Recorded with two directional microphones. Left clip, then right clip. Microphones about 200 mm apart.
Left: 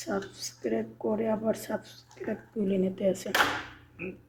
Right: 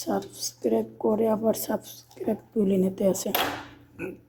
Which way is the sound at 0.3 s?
25° right (ahead or behind).